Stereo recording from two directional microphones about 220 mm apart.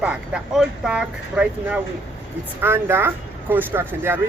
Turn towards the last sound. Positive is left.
turn(degrees=-10)  # may be behind; listen again after turning